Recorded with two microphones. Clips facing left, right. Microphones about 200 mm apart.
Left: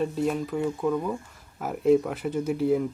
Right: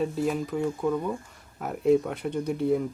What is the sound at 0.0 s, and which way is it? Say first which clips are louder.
Speech: left 1 dB; centre (ahead or behind).